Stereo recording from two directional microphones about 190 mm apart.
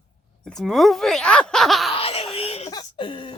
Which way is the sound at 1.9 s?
30° left (ahead or behind).